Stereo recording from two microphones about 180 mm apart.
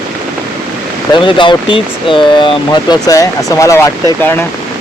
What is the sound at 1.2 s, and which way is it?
Speech, 25° left (ahead or behind).